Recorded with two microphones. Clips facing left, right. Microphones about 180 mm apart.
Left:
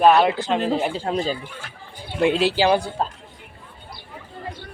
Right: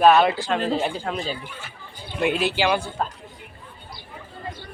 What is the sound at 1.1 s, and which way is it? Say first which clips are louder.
Speech: left 5 dB; 40° left (ahead or behind).